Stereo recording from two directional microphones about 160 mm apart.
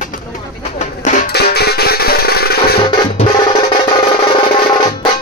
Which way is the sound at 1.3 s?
85° left.